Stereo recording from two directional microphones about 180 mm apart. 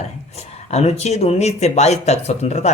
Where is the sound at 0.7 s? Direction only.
35° left (ahead or behind).